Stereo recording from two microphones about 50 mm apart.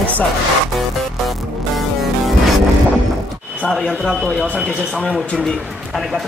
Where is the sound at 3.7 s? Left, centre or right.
Centre.